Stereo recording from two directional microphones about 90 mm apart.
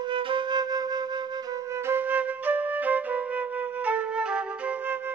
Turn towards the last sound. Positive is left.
turn(degrees=-10)  # may be behind; listen again after turning